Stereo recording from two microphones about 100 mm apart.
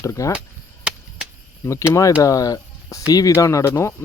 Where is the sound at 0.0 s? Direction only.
30° left (ahead or behind).